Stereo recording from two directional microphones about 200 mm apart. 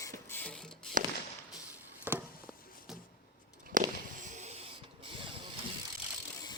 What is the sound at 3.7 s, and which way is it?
Fireworks, 40° right (ahead or behind).